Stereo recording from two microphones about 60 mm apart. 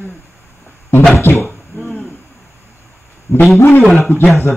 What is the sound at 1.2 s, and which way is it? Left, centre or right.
Speech, left.